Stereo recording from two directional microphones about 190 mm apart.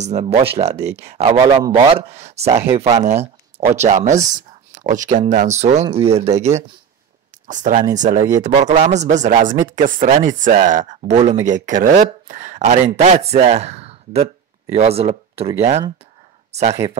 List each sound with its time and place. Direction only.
0.0 s speech: 35° right (ahead or behind)
0.7 s speech: 15° right (ahead or behind)
1.0 s speech: 35° right (ahead or behind)